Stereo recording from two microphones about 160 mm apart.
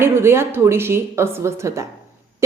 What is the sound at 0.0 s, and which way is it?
A woman's voice, 15° right (ahead or behind).